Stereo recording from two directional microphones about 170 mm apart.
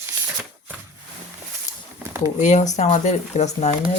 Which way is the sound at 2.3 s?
45° left (ahead or behind).